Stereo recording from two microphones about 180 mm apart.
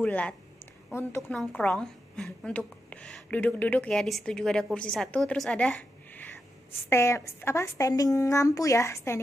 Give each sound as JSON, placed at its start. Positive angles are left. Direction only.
{"t": 0.0, "sound": "a woman's voice", "side_deg": 5}